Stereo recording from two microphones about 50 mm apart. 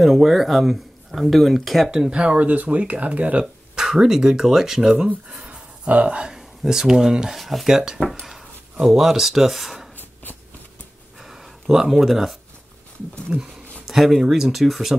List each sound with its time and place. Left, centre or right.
0.0 s speech: centre
1.9 s speech: centre
3.7 s speech: centre
11.1 s a sound: centre
13.3 s speech: centre